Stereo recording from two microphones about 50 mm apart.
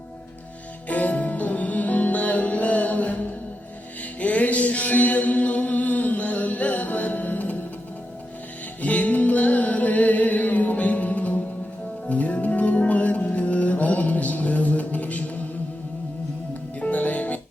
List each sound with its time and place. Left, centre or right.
0.9 s music: left
4.2 s music: left
8.8 s music: left
16.9 s music: left